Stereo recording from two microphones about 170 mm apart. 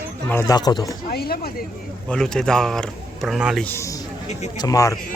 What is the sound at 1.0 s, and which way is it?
Speech, 65° left (ahead or behind).